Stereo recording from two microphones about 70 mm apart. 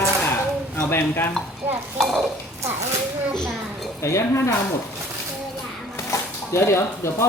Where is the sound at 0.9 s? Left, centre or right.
Left.